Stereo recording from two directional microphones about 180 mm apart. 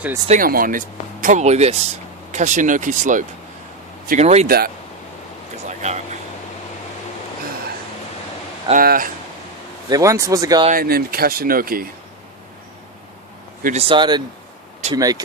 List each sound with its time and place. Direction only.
0.3 s speech: 50° right (ahead or behind)
4.4 s speech: 55° right (ahead or behind)
5.6 s a sound: 40° right (ahead or behind)
8.7 s speech: 55° right (ahead or behind)
9.9 s speech: 15° right (ahead or behind)
10.7 s speech: 55° right (ahead or behind)
13.7 s speech: 30° right (ahead or behind)